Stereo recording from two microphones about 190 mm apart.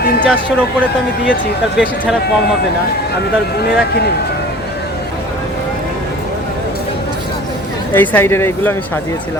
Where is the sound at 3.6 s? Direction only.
60° left (ahead or behind).